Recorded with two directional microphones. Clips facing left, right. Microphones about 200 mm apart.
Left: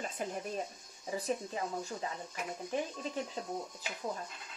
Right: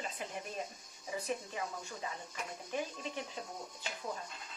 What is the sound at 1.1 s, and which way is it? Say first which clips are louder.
Speech: left 3 dB; 35° left (ahead or behind).